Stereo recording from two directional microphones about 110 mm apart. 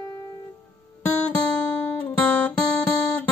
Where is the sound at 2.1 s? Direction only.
15° left (ahead or behind).